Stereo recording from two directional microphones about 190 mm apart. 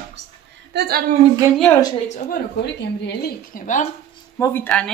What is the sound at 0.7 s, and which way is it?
Speech, 60° right (ahead or behind).